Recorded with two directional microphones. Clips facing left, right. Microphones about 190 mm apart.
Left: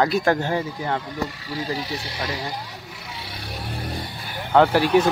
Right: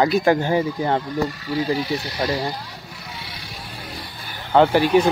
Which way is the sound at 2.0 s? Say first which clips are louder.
Right 6 dB; 25° left (ahead or behind).